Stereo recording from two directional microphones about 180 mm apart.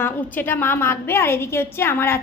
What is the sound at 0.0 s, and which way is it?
A woman's voice, 10° left (ahead or behind).